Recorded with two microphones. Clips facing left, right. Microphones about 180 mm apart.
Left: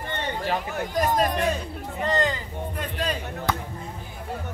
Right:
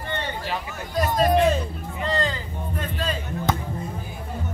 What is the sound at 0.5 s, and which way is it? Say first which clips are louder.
Speech: left 4 dB; 50° left (ahead or behind).